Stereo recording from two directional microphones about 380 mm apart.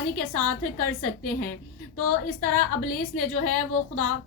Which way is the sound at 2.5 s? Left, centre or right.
Left.